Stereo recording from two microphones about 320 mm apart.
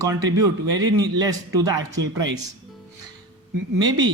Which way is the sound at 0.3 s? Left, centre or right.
Centre.